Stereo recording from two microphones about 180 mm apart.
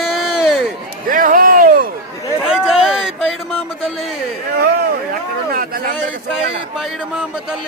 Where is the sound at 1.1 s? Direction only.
50° right (ahead or behind).